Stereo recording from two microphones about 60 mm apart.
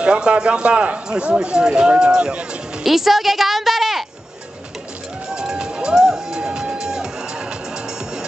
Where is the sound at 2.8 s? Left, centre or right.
Centre.